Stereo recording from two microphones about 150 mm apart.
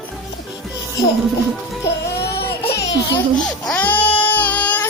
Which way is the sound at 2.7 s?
25° left (ahead or behind).